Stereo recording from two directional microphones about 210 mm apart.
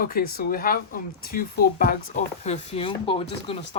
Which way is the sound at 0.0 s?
45° left (ahead or behind).